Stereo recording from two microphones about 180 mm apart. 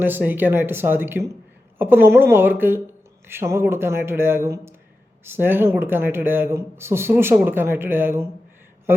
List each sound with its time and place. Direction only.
0.0 s speech: 10° right (ahead or behind)